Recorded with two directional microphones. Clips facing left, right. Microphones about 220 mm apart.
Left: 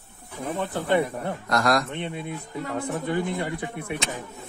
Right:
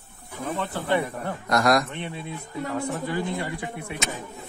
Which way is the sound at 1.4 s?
20° right (ahead or behind).